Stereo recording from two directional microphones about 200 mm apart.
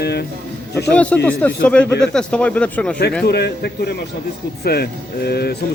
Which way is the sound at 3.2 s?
55° left (ahead or behind).